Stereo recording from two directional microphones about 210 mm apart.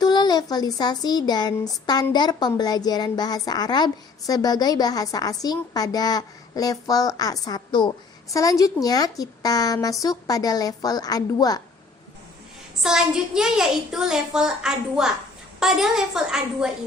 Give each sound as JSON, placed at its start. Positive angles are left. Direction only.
{"t": 0.0, "sound": "a woman's voice", "side_deg": 20}
{"t": 12.8, "sound": "a child's voice", "side_deg": -5}